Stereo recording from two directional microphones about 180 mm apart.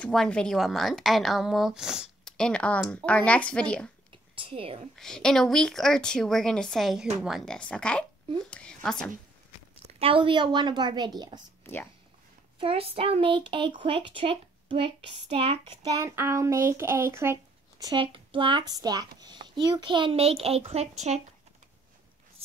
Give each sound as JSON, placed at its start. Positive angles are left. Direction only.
{"t": 0.0, "sound": "a woman's voice", "side_deg": 5}
{"t": 4.1, "sound": "whispering", "side_deg": -30}
{"t": 4.9, "sound": "a woman's voice", "side_deg": 5}
{"t": 9.9, "sound": "a child's voice", "side_deg": -30}
{"t": 11.6, "sound": "speech", "side_deg": 10}
{"t": 12.5, "sound": "a child's voice", "side_deg": -30}
{"t": 15.9, "sound": "a child's voice", "side_deg": -15}